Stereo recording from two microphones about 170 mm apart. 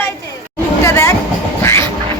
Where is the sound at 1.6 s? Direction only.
15° left (ahead or behind).